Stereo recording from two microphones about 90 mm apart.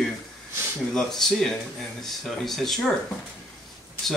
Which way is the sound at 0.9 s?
5° left (ahead or behind).